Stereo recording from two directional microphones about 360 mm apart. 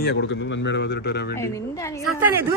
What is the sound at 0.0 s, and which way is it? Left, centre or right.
A man's voice, left.